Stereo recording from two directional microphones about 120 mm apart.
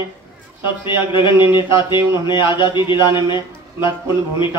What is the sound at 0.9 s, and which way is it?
Speech, 40° left (ahead or behind).